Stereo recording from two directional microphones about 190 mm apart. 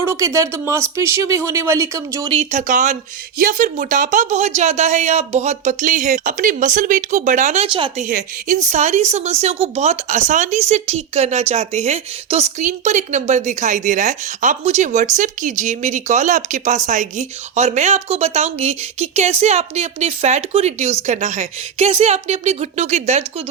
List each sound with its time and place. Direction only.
0.0 s speech: 15° right (ahead or behind)
2.3 s speech: 35° right (ahead or behind)
8.0 s speech: 40° right (ahead or behind)